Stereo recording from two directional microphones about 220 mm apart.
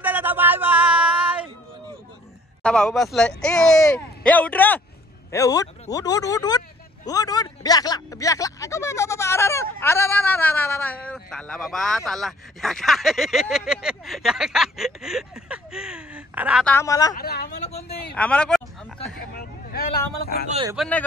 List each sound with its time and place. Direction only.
0.0 s a sound: 10° right (ahead or behind)
2.6 s a man's voice: 5° left (ahead or behind)
16.6 s a man's voice: 10° left (ahead or behind)
17.1 s speech: 45° left (ahead or behind)
17.6 s speech: 30° left (ahead or behind)
18.1 s speech: 5° left (ahead or behind)
19.3 s vehicle: 45° left (ahead or behind)
20.7 s speech: centre (ahead or behind)